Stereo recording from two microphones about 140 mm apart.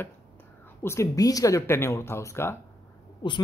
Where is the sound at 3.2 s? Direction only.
35° left (ahead or behind).